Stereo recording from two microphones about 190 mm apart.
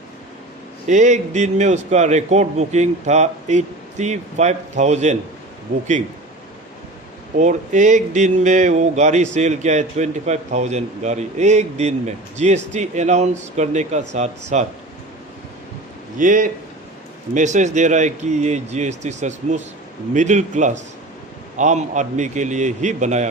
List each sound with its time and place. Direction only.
0.9 s a man's voice: 40° right (ahead or behind)
7.3 s a man's voice: 40° right (ahead or behind)
16.1 s a man's voice: 45° right (ahead or behind)